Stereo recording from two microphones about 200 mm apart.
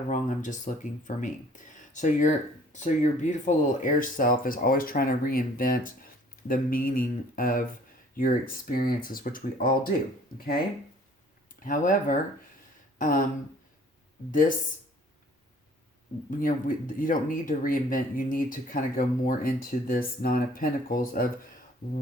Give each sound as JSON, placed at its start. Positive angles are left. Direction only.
{"t": 0.1, "sound": "speech", "side_deg": 40}
{"t": 11.6, "sound": "speech", "side_deg": 40}
{"t": 13.0, "sound": "a sound", "side_deg": 40}
{"t": 14.3, "sound": "speech", "side_deg": 40}
{"t": 16.3, "sound": "speech", "side_deg": 40}